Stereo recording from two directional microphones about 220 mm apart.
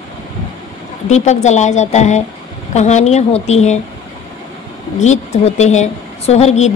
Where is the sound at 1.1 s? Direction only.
30° left (ahead or behind).